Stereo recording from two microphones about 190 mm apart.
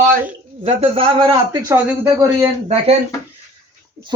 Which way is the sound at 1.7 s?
15° right (ahead or behind).